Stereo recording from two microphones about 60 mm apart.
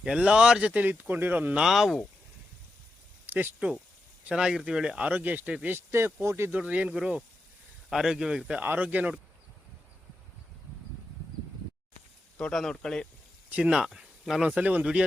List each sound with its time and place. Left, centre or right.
0.0 s speech: centre
0.7 s speech: right
1.6 s speech: centre
3.2 s a sound: right
4.2 s speech: centre
5.0 s speech: right
5.6 s speech: right
6.5 s speech: right
7.9 s speech: centre
8.6 s speech: right
12.4 s speech: centre
13.5 s speech: centre
14.4 s speech: right